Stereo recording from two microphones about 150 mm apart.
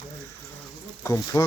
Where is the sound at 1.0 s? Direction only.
20° left (ahead or behind).